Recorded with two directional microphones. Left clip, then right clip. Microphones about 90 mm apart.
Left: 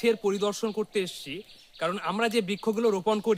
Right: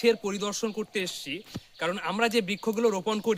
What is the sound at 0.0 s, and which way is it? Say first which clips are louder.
Speech: even; 30° left (ahead or behind).